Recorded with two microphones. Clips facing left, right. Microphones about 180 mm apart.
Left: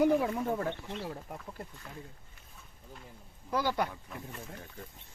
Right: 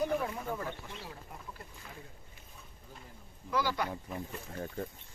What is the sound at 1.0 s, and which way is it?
Speech, 45° left (ahead or behind).